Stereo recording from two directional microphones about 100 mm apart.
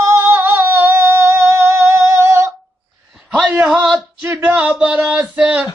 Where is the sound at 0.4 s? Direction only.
25° right (ahead or behind).